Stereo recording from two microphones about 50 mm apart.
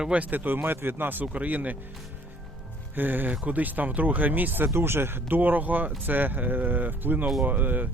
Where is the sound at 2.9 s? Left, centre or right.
Right.